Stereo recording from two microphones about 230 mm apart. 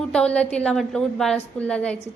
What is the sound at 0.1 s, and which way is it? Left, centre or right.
A woman's voice, centre.